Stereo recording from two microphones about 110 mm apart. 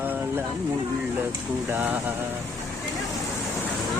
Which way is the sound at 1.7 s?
15° right (ahead or behind).